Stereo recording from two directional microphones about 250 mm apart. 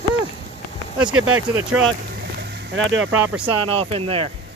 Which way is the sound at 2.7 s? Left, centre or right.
Right.